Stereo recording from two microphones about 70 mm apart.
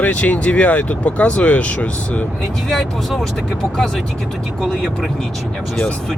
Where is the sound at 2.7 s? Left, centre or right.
Centre.